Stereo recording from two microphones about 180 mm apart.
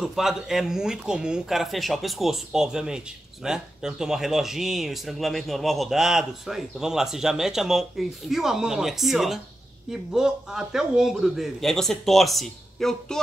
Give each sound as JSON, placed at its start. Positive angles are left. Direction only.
{"t": 0.0, "sound": "speech", "side_deg": 0}